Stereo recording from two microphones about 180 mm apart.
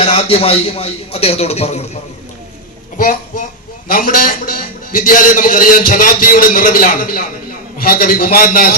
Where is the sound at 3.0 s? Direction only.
45° left (ahead or behind).